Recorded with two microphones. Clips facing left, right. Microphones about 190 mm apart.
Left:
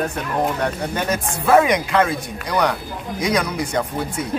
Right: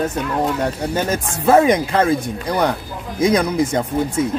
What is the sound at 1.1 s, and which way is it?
Speech, 25° right (ahead or behind).